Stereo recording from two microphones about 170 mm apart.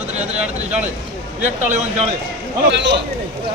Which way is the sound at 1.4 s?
45° right (ahead or behind).